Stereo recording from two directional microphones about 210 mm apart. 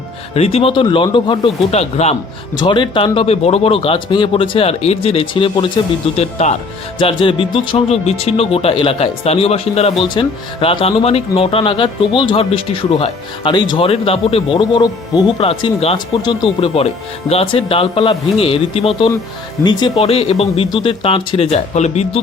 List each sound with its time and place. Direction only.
0.3 s speech: 30° left (ahead or behind)